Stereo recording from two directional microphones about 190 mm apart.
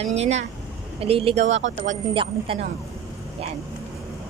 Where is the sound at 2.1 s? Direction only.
25° right (ahead or behind).